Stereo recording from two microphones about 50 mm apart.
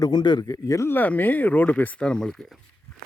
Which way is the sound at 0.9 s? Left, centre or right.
Left.